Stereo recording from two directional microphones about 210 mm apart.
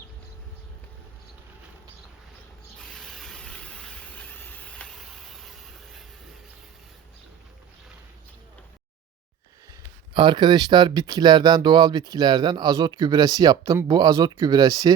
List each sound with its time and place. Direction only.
2.9 s vehicle: centre (ahead or behind)
10.2 s speech: 20° right (ahead or behind)